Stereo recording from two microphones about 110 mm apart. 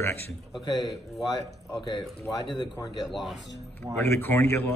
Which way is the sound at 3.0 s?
Centre (ahead or behind).